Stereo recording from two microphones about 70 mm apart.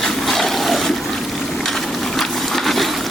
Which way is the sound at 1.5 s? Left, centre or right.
Centre.